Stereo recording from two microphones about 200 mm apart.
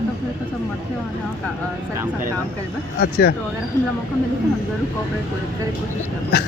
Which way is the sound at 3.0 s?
55° left (ahead or behind).